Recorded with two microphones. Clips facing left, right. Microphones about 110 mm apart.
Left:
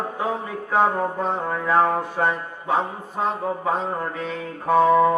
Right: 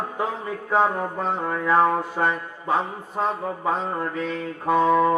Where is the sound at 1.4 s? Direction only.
10° left (ahead or behind).